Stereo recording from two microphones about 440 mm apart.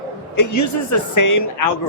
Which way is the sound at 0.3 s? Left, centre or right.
Left.